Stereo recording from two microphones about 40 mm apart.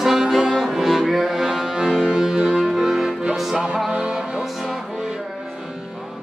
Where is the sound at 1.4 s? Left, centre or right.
Centre.